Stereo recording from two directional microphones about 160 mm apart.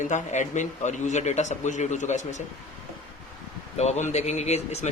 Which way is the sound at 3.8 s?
45° left (ahead or behind).